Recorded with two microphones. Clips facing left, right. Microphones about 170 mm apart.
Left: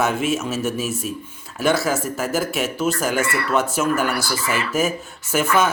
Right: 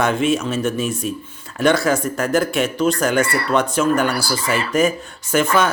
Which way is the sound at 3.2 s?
35° right (ahead or behind).